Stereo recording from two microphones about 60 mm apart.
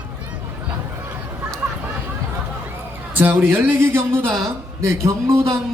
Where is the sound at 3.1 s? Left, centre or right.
Right.